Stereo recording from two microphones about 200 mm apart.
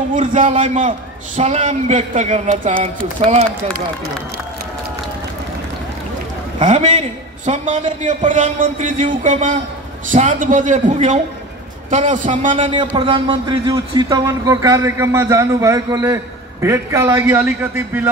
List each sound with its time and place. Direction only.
0.1 s a man's voice: 40° right (ahead or behind)
0.4 s a man's voice: 25° right (ahead or behind)
6.6 s a man's voice: 35° right (ahead or behind)
12.5 s a man's voice: 25° right (ahead or behind); by 18.0 s 10° right (ahead or behind)